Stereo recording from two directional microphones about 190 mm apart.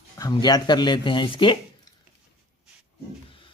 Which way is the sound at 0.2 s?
20° left (ahead or behind).